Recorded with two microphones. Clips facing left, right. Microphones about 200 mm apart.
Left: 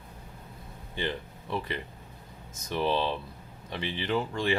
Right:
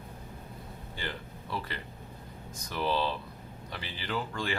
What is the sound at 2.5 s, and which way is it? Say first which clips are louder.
Speech: left 3 dB; 25° left (ahead or behind).